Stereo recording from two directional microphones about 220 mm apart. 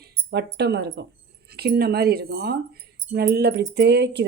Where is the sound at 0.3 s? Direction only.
50° right (ahead or behind).